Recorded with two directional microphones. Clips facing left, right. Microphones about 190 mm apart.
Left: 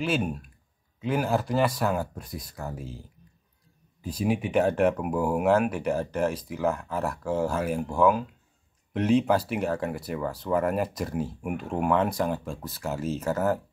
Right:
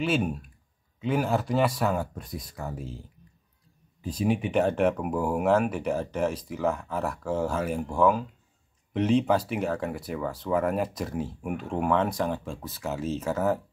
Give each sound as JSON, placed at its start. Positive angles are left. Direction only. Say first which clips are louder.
{"t": 0.0, "sound": "speech", "louder": "right 1 dB", "side_deg": 0}
{"t": 4.0, "sound": "speech", "louder": "right 1 dB", "side_deg": 5}